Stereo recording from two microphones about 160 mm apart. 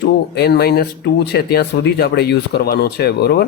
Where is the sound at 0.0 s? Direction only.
90° left.